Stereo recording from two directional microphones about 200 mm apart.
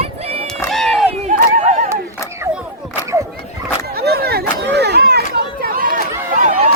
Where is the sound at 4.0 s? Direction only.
50° right (ahead or behind).